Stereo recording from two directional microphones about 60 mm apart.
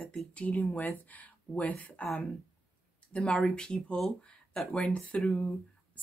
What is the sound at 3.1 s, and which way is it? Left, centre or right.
Speech, centre.